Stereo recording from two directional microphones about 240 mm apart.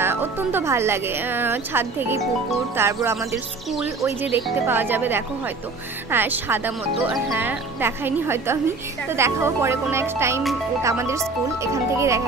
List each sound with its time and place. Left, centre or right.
0.0 s a woman's voice: centre